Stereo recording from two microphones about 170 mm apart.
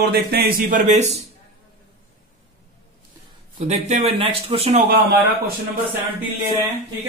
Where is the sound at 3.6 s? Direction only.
40° right (ahead or behind).